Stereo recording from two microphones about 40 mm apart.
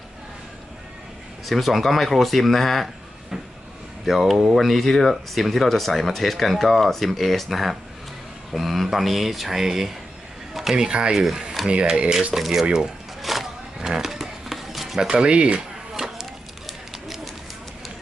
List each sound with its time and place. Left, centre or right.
1.5 s speech: centre
4.0 s speech: centre
10.5 s a sound: centre
10.8 s speech: right
11.6 s speech: centre
11.9 s speech: centre
12.3 s speech: centre
13.2 s a sound: centre
13.7 s roaring cats: centre
14.9 s speech: right
16.0 s a sound: centre
16.6 s bird: centre